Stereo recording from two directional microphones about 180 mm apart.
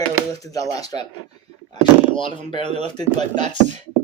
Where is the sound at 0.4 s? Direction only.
20° left (ahead or behind).